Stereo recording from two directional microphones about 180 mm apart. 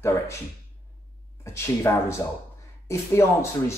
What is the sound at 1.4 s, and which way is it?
Speech, 15° left (ahead or behind).